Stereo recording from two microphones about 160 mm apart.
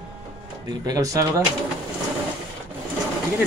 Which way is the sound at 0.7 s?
25° right (ahead or behind).